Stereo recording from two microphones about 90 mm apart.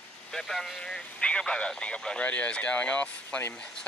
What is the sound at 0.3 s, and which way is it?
Speech, 5° left (ahead or behind).